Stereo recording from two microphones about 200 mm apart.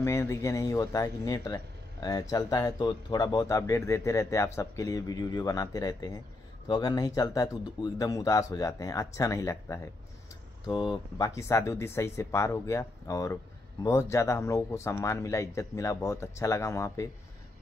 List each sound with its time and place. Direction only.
0.0 s speech: 15° left (ahead or behind)